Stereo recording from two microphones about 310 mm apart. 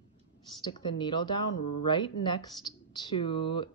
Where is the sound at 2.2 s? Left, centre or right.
Centre.